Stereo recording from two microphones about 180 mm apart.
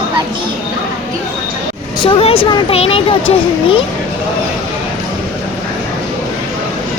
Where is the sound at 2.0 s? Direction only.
30° left (ahead or behind).